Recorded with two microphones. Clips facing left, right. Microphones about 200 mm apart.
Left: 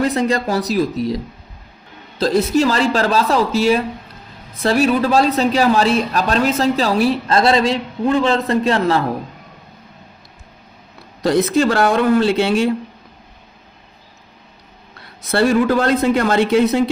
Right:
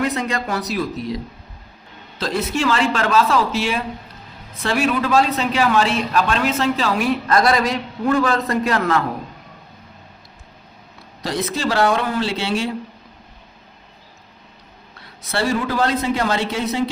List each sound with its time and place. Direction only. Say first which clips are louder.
0.0 s a man's voice: left 5 dB; 35° left (ahead or behind)
11.2 s speech: left 9 dB; 55° left (ahead or behind)
15.3 s speech: left 7 dB; 55° left (ahead or behind)